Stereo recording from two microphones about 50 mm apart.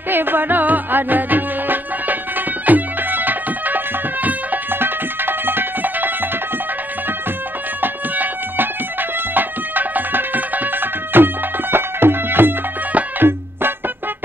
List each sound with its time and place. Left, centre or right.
0.1 s music: right
7.8 s a sound: right
9.3 s music: right